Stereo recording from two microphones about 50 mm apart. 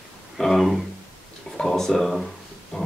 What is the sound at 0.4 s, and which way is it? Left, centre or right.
Speech, centre.